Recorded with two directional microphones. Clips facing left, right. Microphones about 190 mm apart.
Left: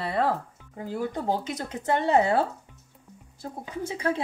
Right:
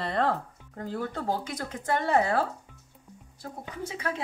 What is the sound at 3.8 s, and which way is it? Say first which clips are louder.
Speech: left 6 dB; 30° left (ahead or behind).